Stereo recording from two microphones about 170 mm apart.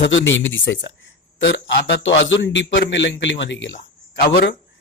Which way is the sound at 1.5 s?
80° left.